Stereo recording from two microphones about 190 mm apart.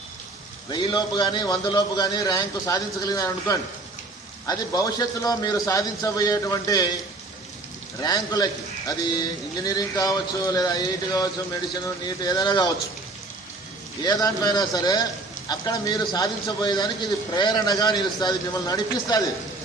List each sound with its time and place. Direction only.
0.7 s a man's voice: 25° left (ahead or behind)
8.0 s a man's voice: 20° left (ahead or behind)
14.0 s a man's voice: 20° left (ahead or behind)